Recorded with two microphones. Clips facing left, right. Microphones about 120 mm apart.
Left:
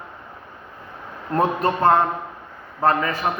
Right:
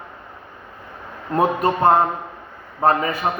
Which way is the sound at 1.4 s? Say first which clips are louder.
Right 2 dB; 15° right (ahead or behind).